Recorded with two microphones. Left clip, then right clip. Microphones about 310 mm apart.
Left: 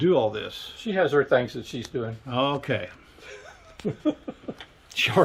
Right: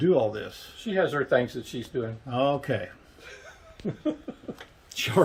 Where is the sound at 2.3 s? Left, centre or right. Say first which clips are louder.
Even; centre.